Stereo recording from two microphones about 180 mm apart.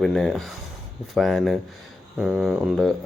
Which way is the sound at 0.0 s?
Centre (ahead or behind).